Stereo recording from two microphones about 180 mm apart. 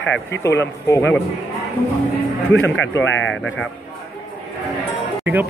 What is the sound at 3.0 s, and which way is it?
Speech, 90° left.